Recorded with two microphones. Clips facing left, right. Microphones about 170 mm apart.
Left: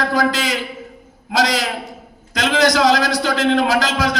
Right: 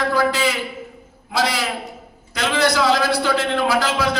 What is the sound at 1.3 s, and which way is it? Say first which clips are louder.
A man's voice: left 3 dB; 90° left.